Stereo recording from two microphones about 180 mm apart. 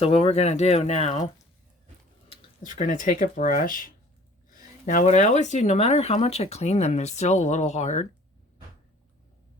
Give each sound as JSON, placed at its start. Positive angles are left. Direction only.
{"t": 0.0, "sound": "speech", "side_deg": 35}
{"t": 2.7, "sound": "speech", "side_deg": 45}